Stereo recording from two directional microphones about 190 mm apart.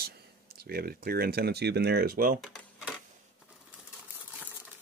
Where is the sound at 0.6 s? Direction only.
55° right (ahead or behind).